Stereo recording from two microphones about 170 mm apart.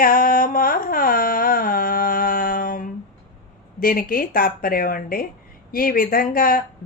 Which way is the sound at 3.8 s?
55° left (ahead or behind).